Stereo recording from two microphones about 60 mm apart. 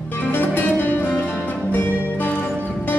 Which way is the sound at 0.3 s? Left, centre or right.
Left.